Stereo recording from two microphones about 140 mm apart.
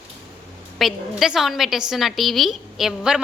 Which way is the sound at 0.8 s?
Centre (ahead or behind).